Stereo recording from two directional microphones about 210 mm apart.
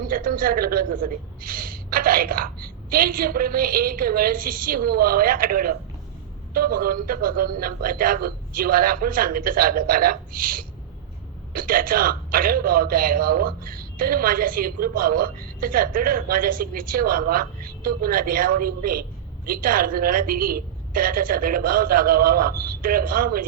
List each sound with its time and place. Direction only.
0.1 s a man's voice: 45° right (ahead or behind)